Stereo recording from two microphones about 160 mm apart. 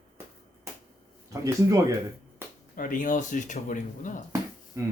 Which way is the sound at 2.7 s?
60° left (ahead or behind).